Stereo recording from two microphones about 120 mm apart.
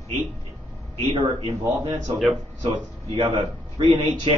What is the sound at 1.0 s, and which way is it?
Speech, 60° right (ahead or behind).